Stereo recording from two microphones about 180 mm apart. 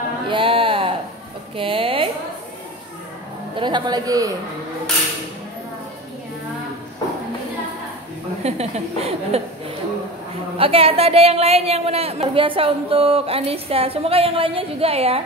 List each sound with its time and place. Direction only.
0.3 s a sound: 30° right (ahead or behind)
3.5 s a woman's voice: 25° right (ahead or behind)
8.4 s a woman's voice: 35° right (ahead or behind)
10.6 s a woman's voice: 30° right (ahead or behind)